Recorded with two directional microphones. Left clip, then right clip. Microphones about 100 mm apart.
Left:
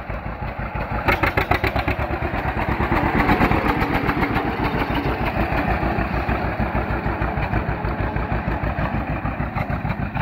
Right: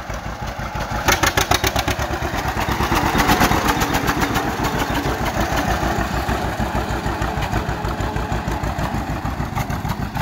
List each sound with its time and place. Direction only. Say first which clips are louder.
1.0 s vehicle: right 3 dB; 30° right (ahead or behind)